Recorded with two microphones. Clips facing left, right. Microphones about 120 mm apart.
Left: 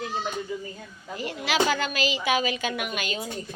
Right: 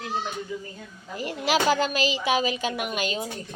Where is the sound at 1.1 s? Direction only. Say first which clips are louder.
Right 1 dB; 40° right (ahead or behind).